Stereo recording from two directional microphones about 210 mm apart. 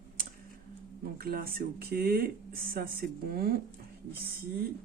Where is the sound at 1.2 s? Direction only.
45° right (ahead or behind).